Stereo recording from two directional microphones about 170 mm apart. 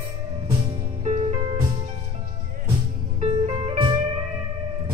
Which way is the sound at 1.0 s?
40° right (ahead or behind).